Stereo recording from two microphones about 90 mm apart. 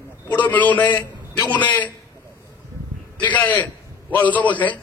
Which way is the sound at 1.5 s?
20° left (ahead or behind).